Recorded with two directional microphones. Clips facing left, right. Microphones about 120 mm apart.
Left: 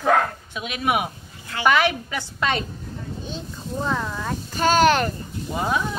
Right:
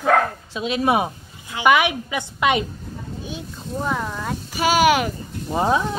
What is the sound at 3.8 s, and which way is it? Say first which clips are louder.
Speech: right 1 dB; 10° right (ahead or behind).